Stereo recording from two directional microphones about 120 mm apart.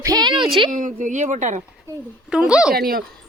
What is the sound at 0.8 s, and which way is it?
Speech, 90° right.